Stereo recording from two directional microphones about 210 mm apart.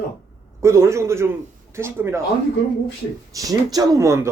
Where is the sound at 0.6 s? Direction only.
15° right (ahead or behind).